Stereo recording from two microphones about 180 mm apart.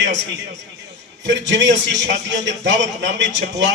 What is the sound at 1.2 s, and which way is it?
A man's voice, 80° right.